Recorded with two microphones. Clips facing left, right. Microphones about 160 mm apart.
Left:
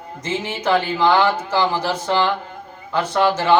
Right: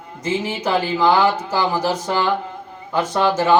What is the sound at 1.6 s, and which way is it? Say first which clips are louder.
Speech: even; 15° right (ahead or behind).